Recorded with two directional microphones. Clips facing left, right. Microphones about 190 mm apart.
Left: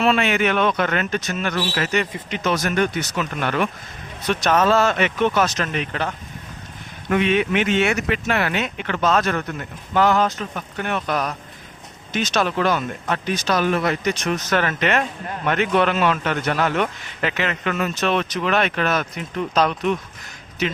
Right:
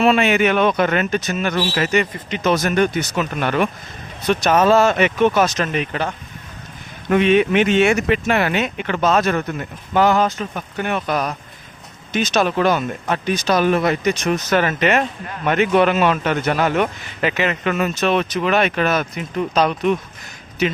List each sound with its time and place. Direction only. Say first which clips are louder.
0.0 s a man's voice: right 4 dB; 15° right (ahead or behind)
7.1 s a man's voice: right 4 dB; 25° right (ahead or behind); by 20.0 s 5° right (ahead or behind)